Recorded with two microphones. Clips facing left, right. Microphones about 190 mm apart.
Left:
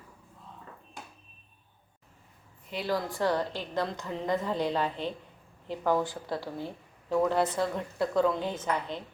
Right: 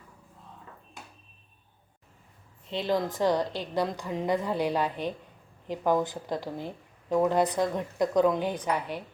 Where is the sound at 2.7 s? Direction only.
20° right (ahead or behind).